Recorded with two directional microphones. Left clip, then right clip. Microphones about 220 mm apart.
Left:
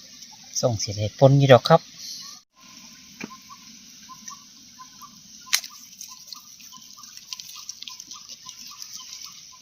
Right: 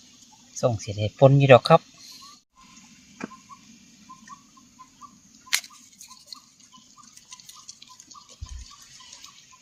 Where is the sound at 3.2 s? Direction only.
15° right (ahead or behind).